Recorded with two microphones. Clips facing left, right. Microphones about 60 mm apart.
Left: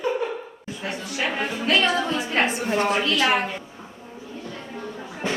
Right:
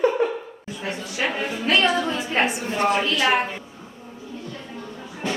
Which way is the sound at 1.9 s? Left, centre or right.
Centre.